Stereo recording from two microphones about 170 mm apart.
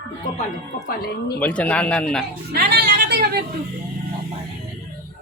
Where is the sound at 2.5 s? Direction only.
75° right (ahead or behind).